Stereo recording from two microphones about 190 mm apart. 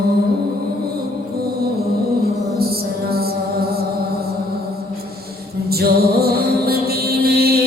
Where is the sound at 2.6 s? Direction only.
55° right (ahead or behind).